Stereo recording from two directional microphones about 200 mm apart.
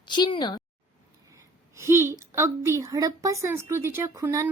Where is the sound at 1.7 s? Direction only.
15° right (ahead or behind).